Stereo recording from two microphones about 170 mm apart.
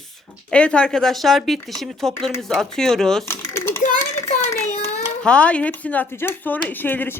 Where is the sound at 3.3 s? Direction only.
15° left (ahead or behind).